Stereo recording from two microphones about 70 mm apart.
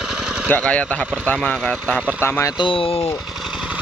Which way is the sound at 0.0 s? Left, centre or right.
Centre.